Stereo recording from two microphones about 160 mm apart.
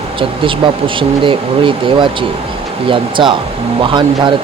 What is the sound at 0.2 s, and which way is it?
Speech, 30° right (ahead or behind).